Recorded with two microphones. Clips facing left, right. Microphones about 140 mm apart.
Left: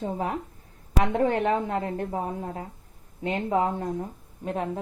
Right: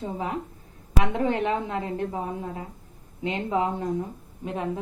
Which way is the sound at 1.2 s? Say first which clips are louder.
Left 2 dB; 50° left (ahead or behind).